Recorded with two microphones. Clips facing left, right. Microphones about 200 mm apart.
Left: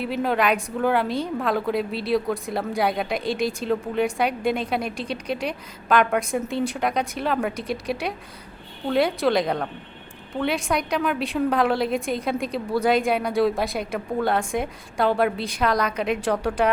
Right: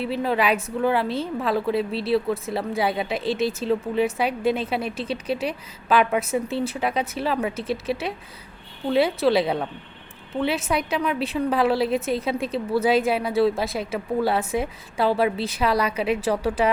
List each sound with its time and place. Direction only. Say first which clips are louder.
0.2 s a woman's voice: left 1 dB; 5° right (ahead or behind)